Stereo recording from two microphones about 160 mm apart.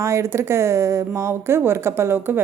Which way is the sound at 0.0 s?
15° right (ahead or behind).